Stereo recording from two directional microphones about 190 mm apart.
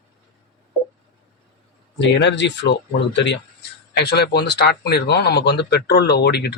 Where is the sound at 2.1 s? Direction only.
65° left (ahead or behind).